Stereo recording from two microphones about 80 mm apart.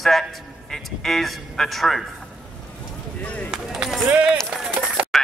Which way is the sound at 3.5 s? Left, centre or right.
Centre.